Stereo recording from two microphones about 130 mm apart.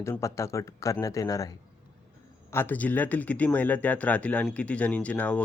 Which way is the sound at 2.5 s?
15° left (ahead or behind).